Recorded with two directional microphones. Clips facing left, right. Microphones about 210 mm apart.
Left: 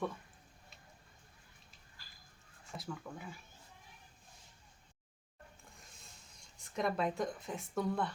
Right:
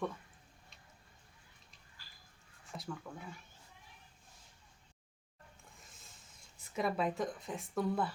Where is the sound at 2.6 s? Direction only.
Centre (ahead or behind).